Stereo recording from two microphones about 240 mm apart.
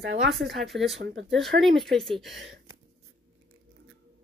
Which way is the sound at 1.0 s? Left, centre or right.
Right.